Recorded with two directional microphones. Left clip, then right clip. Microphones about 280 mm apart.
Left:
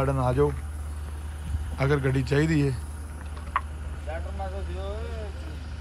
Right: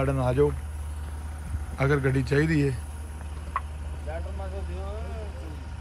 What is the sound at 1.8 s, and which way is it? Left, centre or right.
A man's voice, centre.